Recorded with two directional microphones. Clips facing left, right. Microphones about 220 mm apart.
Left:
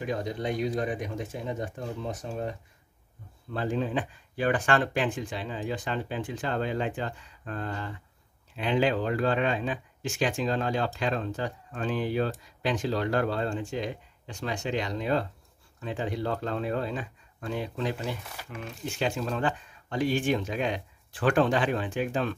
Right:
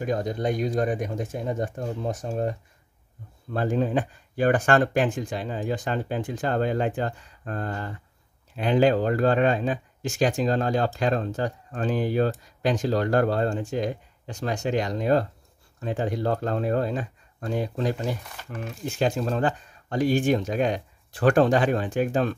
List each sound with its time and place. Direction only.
0.0 s speech: 45° right (ahead or behind)
3.5 s speech: 45° right (ahead or behind)
18.2 s speech: 10° left (ahead or behind)
18.9 s speech: 40° right (ahead or behind)